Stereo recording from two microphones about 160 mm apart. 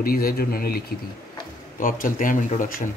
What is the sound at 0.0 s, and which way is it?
Speech, 65° left (ahead or behind).